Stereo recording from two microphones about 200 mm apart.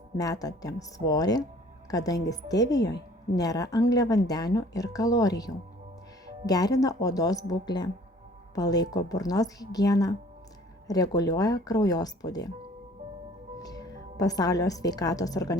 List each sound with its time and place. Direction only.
0.2 s a woman's voice: 20° left (ahead or behind)
13.6 s a woman's voice: 20° left (ahead or behind)